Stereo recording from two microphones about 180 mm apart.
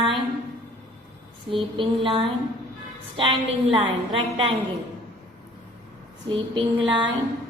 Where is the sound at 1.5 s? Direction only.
30° right (ahead or behind).